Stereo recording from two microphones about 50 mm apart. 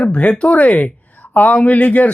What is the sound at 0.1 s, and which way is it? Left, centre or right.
Speech, left.